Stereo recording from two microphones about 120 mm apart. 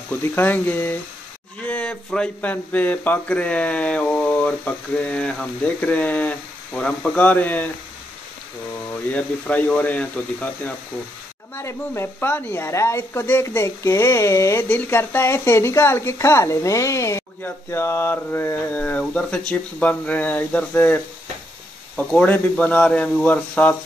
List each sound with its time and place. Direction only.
0.1 s speech: 15° left (ahead or behind)
9.1 s speech: 10° left (ahead or behind)